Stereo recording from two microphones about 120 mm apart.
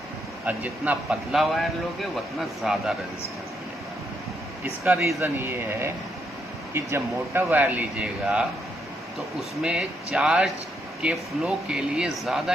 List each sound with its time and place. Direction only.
0.4 s speech: 10° right (ahead or behind)
1.4 s a man's voice: centre (ahead or behind)
4.9 s speech: 20° right (ahead or behind)
9.6 s a man's voice: 10° right (ahead or behind)